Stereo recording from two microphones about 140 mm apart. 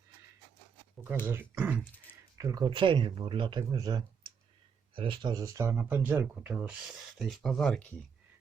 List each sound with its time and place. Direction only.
1.2 s speech: 15° right (ahead or behind)
2.4 s speech: 30° right (ahead or behind); by 7.9 s 5° left (ahead or behind)